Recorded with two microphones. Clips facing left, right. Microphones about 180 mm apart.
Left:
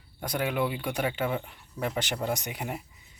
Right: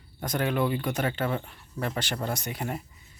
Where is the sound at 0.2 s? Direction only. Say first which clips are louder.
Right 2 dB; 10° left (ahead or behind).